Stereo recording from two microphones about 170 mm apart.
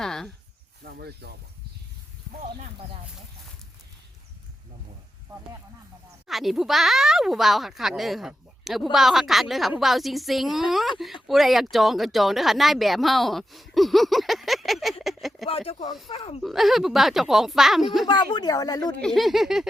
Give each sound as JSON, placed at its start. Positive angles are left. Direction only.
{"t": 0.0, "sound": "a sound", "side_deg": 5}
{"t": 0.9, "sound": "speech", "side_deg": -75}
{"t": 6.2, "sound": "speech", "side_deg": 0}
{"t": 15.0, "sound": "a sound", "side_deg": 0}
{"t": 15.4, "sound": "speech", "side_deg": 35}
{"t": 16.4, "sound": "speech", "side_deg": 0}
{"t": 18.0, "sound": "speech", "side_deg": 25}
{"t": 19.0, "sound": "speech", "side_deg": 0}